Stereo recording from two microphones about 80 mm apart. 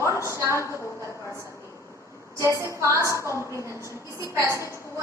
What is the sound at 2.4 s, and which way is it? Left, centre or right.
Speech, right.